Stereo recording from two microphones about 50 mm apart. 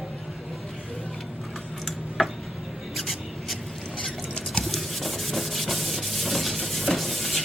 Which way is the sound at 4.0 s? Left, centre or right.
Centre.